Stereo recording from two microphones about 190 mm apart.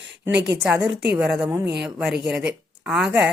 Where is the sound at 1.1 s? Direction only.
5° right (ahead or behind).